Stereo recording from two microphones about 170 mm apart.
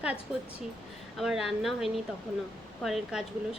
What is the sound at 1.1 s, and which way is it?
Speech, centre (ahead or behind).